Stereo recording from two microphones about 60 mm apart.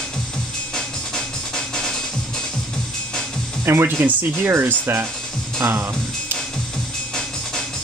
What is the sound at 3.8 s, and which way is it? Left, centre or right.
Speech, right.